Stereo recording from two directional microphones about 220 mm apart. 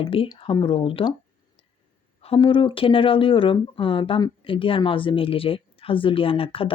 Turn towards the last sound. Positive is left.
turn(degrees=25)  # may be behind; listen again after turning